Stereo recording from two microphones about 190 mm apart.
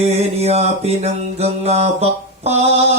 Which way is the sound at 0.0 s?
35° right (ahead or behind).